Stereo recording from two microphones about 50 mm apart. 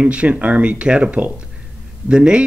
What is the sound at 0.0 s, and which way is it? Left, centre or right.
Speech, right.